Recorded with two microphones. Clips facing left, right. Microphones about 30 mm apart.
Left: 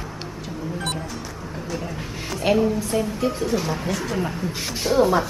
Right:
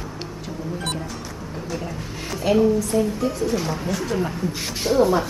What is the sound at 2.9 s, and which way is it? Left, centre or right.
Speech, left.